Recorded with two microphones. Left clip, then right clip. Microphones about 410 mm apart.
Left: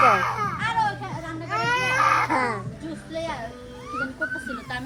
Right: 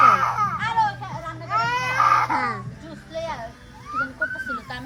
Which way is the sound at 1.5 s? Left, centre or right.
Centre.